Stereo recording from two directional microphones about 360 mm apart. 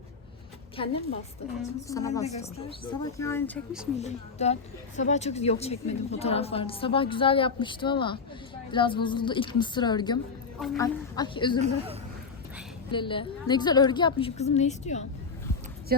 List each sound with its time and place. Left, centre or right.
0.8 s a woman's voice: centre
3.9 s a woman's voice: centre
12.9 s a woman's voice: centre
15.9 s speech: right